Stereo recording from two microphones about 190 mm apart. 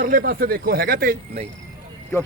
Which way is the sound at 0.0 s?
45° right (ahead or behind).